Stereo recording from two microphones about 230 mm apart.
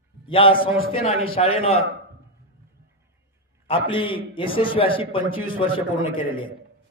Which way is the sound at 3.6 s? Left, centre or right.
Left.